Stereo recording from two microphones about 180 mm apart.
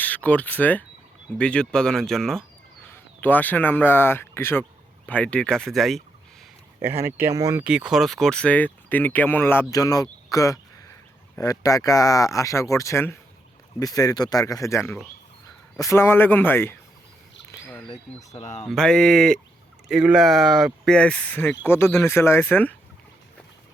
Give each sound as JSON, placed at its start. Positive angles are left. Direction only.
{"t": 0.0, "sound": "a man's voice", "side_deg": 10}
{"t": 6.8, "sound": "speech", "side_deg": -15}
{"t": 7.6, "sound": "speech", "side_deg": -5}
{"t": 10.3, "sound": "a sound", "side_deg": 20}
{"t": 11.3, "sound": "speech", "side_deg": 20}
{"t": 18.3, "sound": "speech", "side_deg": 40}
{"t": 18.7, "sound": "speech", "side_deg": 5}